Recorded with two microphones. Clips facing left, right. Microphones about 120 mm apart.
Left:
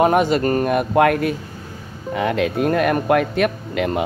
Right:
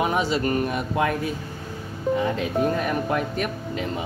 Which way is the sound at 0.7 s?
60° left (ahead or behind).